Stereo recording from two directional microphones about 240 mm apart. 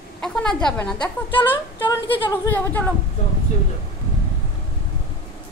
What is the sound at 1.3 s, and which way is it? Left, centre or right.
Speech, left.